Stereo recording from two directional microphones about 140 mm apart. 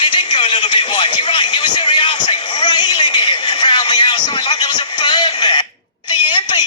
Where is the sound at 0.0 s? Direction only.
35° left (ahead or behind).